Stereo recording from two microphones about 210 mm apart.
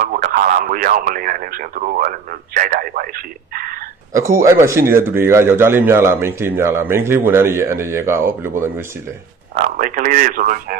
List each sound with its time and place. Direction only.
0.0 s speech: 40° right (ahead or behind)
4.1 s speech: 15° right (ahead or behind)
9.6 s speech: 40° right (ahead or behind)